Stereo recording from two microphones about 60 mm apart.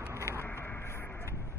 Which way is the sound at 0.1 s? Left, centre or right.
Right.